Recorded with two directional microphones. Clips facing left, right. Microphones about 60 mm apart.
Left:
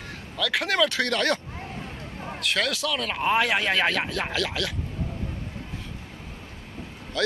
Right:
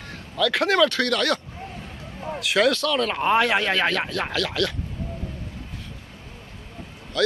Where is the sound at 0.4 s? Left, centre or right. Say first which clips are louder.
Right 4 dB; centre.